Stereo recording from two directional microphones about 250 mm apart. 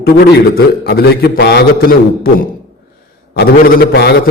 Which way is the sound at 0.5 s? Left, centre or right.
Left.